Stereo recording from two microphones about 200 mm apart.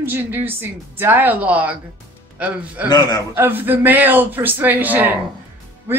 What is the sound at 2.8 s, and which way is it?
Speech, 20° left (ahead or behind).